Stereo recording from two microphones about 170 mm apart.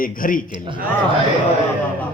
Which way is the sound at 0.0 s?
55° left (ahead or behind).